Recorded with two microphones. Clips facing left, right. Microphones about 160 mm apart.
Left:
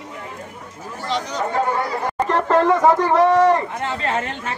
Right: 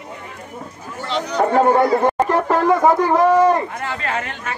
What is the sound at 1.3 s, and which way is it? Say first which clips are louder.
Speech: right 9 dB; 60° right (ahead or behind).